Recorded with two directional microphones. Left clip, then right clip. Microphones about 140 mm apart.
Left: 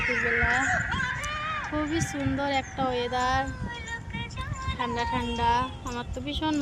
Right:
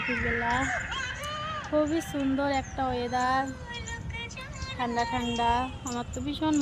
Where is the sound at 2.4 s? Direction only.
10° right (ahead or behind).